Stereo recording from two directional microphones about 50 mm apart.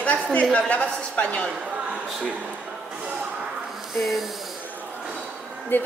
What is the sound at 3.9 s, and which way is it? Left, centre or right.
Speech, centre.